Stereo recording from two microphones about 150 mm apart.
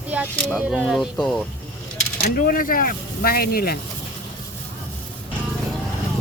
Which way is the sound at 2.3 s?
70° left (ahead or behind).